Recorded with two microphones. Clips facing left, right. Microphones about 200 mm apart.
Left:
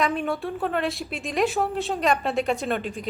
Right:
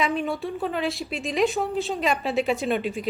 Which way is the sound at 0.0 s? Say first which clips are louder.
Even; centre (ahead or behind).